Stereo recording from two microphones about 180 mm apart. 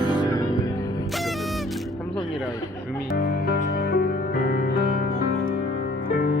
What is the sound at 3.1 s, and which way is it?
Music, 55° left (ahead or behind).